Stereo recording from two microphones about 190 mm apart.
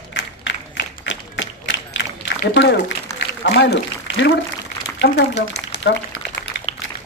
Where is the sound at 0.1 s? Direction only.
75° left (ahead or behind).